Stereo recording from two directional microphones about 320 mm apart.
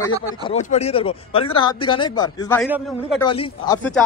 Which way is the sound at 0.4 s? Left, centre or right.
Centre.